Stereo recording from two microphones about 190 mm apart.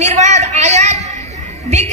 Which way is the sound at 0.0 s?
40° right (ahead or behind).